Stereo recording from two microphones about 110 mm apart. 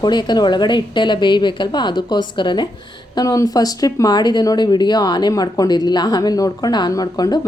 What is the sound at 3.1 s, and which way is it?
Speech, 30° left (ahead or behind).